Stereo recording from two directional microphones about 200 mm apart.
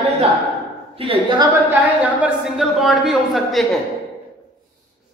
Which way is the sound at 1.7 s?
10° right (ahead or behind).